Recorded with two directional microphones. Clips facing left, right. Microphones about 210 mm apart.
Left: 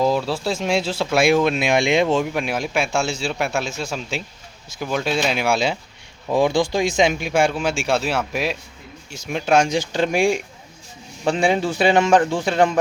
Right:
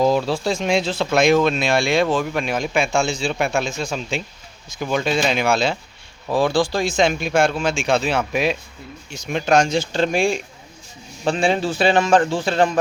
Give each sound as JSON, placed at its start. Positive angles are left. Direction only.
{"t": 0.0, "sound": "speech", "side_deg": 0}
{"t": 2.2, "sound": "a man's voice", "side_deg": 10}
{"t": 6.3, "sound": "speech", "side_deg": 20}